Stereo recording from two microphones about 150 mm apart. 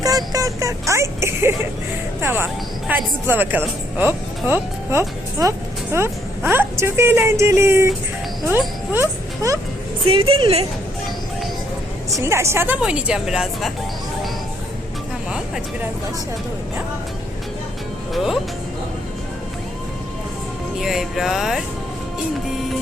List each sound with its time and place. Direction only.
0.0 s a sound: 25° right (ahead or behind)
2.2 s speech: 15° right (ahead or behind)
8.9 s speech: 20° right (ahead or behind)
10.1 s a woman's voice: 40° right (ahead or behind)
12.1 s speech: 20° right (ahead or behind); by 13.7 s centre (ahead or behind)
18.1 s speech: centre (ahead or behind)
20.7 s speech: 5° right (ahead or behind)